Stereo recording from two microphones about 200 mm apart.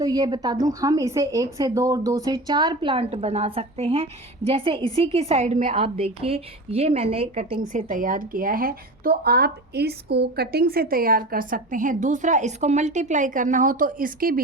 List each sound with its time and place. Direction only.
0.0 s a woman's voice: 20° right (ahead or behind); by 14.4 s 45° right (ahead or behind)